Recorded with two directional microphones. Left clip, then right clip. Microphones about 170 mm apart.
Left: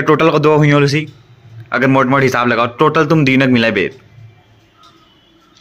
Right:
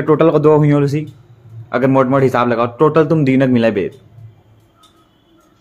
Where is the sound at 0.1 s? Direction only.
5° left (ahead or behind).